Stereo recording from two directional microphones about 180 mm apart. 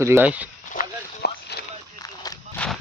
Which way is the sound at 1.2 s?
65° left (ahead or behind).